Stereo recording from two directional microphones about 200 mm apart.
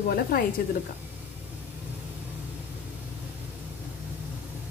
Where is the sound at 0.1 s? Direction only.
50° left (ahead or behind).